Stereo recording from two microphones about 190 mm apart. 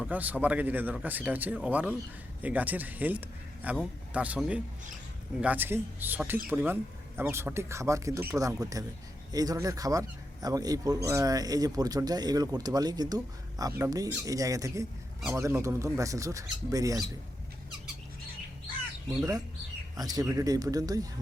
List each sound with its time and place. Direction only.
0.0 s a man's voice: 10° right (ahead or behind)
19.0 s a man's voice: 20° right (ahead or behind)